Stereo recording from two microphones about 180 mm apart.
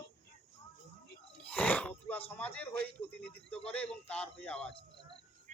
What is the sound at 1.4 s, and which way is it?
A man's voice, 10° left (ahead or behind).